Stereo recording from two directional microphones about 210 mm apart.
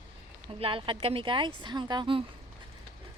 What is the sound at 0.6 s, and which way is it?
Speech, 25° right (ahead or behind).